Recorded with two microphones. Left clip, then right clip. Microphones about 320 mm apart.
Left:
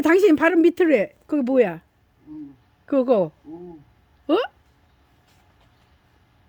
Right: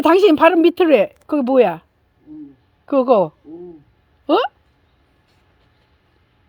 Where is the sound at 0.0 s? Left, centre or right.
Left.